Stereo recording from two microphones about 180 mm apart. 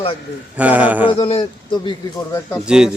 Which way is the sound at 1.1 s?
30° left (ahead or behind).